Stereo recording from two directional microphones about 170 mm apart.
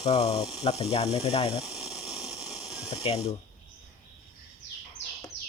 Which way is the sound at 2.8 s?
35° left (ahead or behind).